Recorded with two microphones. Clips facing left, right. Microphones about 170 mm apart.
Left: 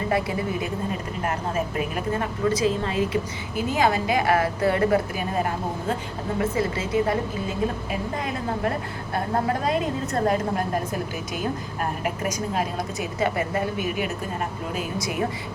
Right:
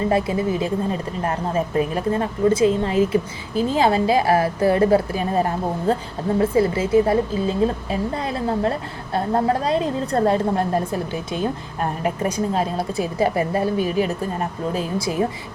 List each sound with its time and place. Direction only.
0.1 s a woman's voice: 25° right (ahead or behind)